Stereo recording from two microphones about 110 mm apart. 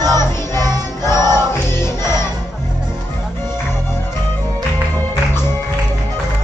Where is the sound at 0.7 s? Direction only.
25° left (ahead or behind).